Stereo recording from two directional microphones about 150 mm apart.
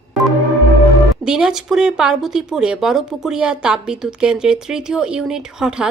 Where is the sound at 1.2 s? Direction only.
5° right (ahead or behind).